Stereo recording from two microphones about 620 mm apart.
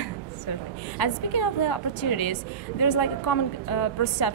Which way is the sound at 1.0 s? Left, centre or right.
Left.